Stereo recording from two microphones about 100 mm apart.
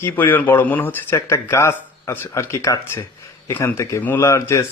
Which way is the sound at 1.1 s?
30° left (ahead or behind).